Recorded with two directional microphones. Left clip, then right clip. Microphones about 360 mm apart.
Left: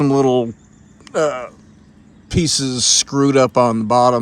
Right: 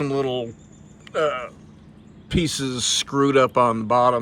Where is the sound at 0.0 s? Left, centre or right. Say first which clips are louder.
Left 9 dB; left.